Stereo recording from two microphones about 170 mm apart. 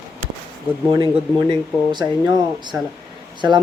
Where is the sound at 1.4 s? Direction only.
25° right (ahead or behind).